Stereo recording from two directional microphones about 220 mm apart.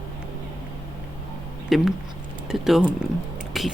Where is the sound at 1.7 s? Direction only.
Centre (ahead or behind).